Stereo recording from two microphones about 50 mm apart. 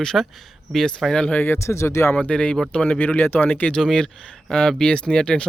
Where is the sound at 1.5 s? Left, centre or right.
Left.